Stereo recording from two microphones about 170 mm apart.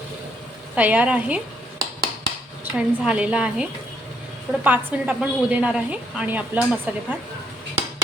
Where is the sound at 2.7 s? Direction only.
5° right (ahead or behind).